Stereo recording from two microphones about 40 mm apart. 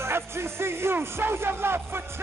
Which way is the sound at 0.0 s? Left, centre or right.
Right.